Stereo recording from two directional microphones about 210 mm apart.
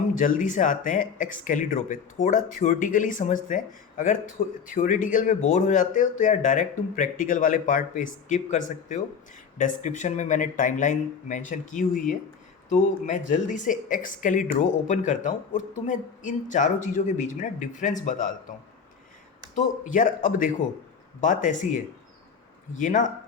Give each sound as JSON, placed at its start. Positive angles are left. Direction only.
{"t": 0.1, "sound": "speech", "side_deg": 40}
{"t": 19.5, "sound": "speech", "side_deg": 35}